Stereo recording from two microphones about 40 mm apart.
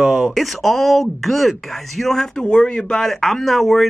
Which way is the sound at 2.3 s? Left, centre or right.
Left.